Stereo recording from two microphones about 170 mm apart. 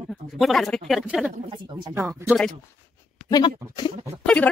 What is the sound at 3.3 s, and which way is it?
Speech, 25° left (ahead or behind).